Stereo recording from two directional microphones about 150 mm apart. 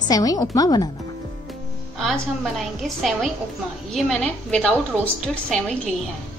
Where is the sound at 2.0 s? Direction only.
Centre (ahead or behind).